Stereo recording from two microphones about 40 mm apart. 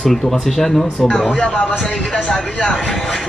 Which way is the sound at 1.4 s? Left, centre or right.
Left.